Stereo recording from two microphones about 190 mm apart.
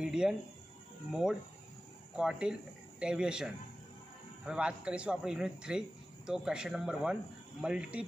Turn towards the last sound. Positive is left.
turn(degrees=-5)  # may be behind; listen again after turning